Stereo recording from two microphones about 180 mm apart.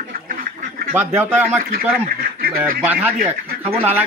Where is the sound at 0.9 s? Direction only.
10° right (ahead or behind).